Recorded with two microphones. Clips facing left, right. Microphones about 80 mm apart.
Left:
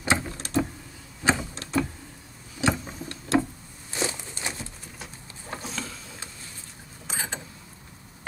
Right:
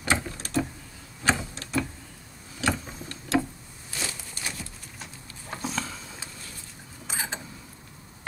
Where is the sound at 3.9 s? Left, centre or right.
Left.